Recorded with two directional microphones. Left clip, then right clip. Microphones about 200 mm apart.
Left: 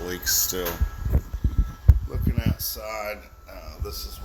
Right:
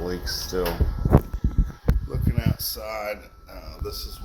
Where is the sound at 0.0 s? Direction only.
50° left (ahead or behind).